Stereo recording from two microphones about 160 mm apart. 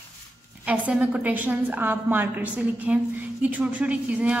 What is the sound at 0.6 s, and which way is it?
A woman's voice, 10° right (ahead or behind).